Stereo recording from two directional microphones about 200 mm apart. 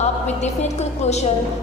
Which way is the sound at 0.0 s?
35° left (ahead or behind).